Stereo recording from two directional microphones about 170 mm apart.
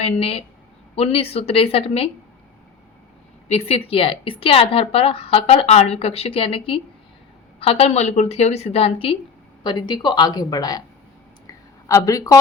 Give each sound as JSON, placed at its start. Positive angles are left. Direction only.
{"t": 0.0, "sound": "speech", "side_deg": 35}
{"t": 3.5, "sound": "a woman's voice", "side_deg": 35}
{"t": 11.9, "sound": "a woman's voice", "side_deg": 20}